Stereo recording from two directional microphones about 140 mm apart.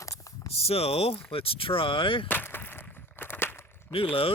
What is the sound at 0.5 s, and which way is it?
Speech, 45° left (ahead or behind).